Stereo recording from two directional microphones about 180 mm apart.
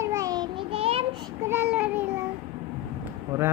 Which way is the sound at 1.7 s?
10° right (ahead or behind).